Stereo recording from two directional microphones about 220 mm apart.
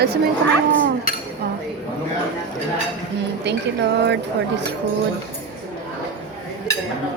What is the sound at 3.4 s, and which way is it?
A woman's voice, 50° right (ahead or behind).